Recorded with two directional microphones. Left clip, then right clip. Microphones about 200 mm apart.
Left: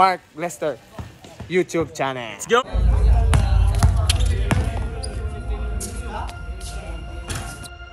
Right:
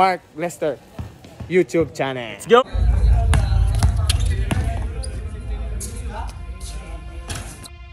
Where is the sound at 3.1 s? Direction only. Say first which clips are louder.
Even; centre (ahead or behind).